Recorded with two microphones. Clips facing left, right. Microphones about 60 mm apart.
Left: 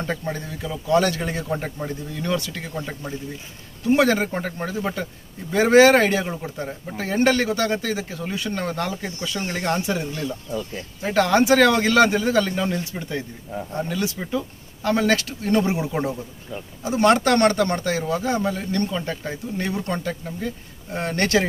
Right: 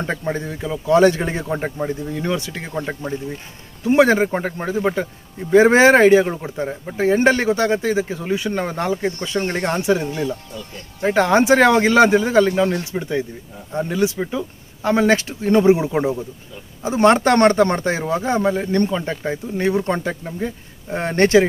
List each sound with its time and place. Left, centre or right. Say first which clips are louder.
0.0 s speech: right 4 dB; right